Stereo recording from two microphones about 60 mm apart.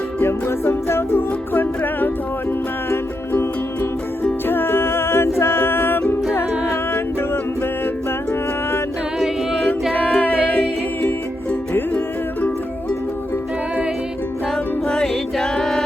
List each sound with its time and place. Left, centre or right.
0.2 s music: left
4.2 s music: left
10.1 s music: left
11.7 s music: left
14.8 s music: centre